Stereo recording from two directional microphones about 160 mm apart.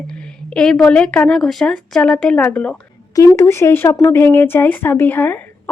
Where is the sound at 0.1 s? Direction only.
5° left (ahead or behind).